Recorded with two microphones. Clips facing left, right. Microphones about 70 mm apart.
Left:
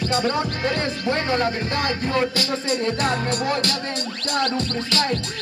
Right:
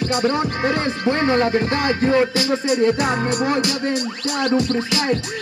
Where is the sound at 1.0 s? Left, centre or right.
Right; by 3.7 s centre.